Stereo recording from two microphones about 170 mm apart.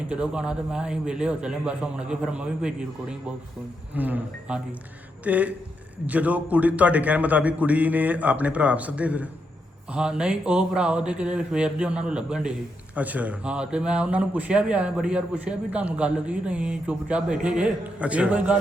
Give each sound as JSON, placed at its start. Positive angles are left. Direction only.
{"t": 0.1, "sound": "a man's voice", "side_deg": -5}